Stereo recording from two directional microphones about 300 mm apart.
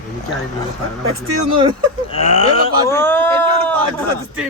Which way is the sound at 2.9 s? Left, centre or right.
Centre.